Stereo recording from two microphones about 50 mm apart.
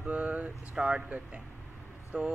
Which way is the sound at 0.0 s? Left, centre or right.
Right.